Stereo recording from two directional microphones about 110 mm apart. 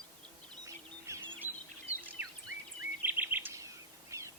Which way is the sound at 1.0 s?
25° right (ahead or behind).